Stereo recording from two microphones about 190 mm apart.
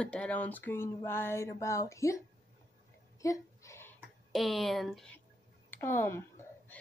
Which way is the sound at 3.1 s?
15° left (ahead or behind).